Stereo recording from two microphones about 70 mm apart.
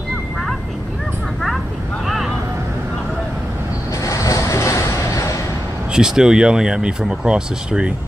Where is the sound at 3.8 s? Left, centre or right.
Left.